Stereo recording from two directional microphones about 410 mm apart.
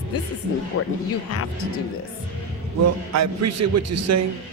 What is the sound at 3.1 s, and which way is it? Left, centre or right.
A man's voice, right.